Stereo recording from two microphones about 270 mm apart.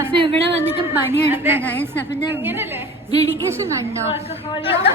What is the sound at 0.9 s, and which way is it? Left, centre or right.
Speech, centre.